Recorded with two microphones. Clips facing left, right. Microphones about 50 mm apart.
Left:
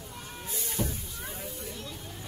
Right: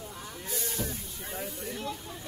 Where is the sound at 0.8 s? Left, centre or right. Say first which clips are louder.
Left 5 dB; left.